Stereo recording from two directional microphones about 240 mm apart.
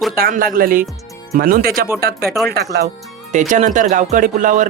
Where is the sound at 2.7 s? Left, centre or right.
Right.